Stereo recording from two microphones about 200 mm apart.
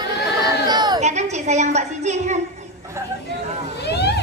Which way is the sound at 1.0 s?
35° right (ahead or behind).